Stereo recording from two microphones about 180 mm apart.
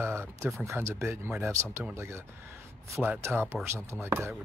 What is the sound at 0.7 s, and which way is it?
Speech, 15° right (ahead or behind).